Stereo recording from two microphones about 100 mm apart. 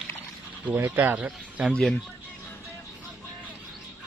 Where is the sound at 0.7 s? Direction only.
20° right (ahead or behind).